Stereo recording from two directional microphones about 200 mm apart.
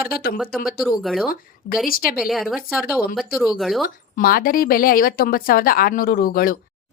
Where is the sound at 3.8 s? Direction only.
45° left (ahead or behind).